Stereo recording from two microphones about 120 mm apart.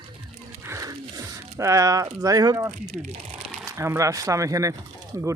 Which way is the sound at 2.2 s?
30° right (ahead or behind).